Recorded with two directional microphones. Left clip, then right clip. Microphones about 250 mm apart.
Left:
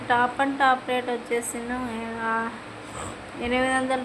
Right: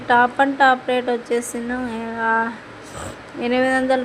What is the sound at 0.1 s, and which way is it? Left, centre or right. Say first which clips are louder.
Speech: right 7 dB; centre.